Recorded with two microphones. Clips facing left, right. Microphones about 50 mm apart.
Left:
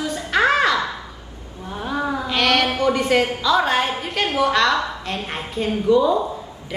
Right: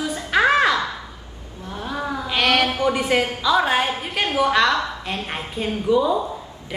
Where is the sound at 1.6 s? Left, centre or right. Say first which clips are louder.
Left 3 dB; centre.